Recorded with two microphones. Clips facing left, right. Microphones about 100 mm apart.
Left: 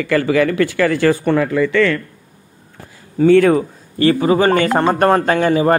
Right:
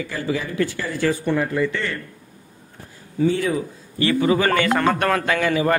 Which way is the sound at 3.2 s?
65° left (ahead or behind).